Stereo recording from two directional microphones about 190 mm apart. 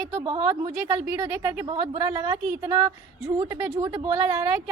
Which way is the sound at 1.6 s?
25° right (ahead or behind).